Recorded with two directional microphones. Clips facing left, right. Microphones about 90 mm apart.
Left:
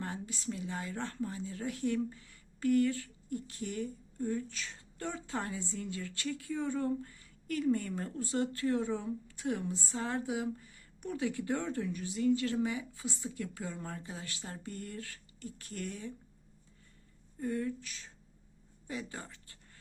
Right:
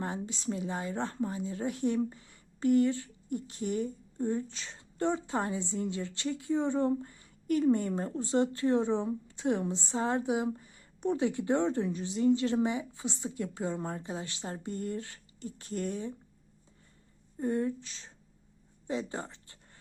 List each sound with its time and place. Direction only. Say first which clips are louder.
0.0 s a woman's voice: right 4 dB; 20° right (ahead or behind)
17.3 s a woman's voice: right 5 dB; 30° right (ahead or behind)
18.9 s a sound: right 7 dB; 25° right (ahead or behind)